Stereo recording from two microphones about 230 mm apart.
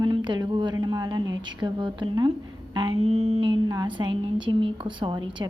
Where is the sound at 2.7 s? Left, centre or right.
Centre.